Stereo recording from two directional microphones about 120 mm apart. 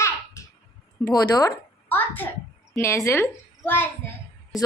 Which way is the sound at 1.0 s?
30° left (ahead or behind).